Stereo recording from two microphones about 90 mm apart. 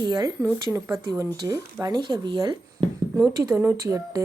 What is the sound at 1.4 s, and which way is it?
Speech, 45° right (ahead or behind).